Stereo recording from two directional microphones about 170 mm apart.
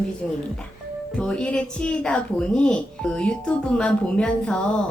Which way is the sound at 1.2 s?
5° left (ahead or behind).